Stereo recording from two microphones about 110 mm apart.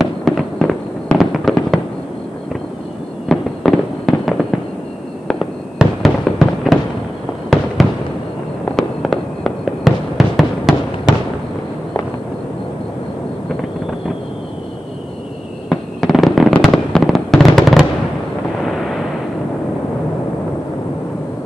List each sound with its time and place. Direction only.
0.0 s fireworks: centre (ahead or behind)
3.3 s fireworks: centre (ahead or behind)
15.7 s fireworks: centre (ahead or behind)